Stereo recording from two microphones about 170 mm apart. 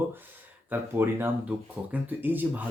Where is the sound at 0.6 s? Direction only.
10° right (ahead or behind).